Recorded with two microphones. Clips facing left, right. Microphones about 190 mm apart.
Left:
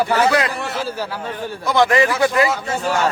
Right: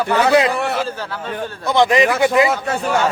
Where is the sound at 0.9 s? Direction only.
10° left (ahead or behind).